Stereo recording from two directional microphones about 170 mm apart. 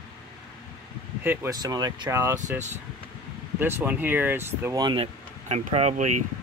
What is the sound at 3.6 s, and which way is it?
Speech, 10° right (ahead or behind).